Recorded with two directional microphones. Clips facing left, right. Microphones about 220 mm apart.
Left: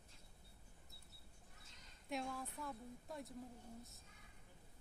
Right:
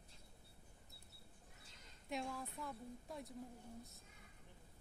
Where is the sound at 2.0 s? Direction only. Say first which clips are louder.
Even; centre (ahead or behind).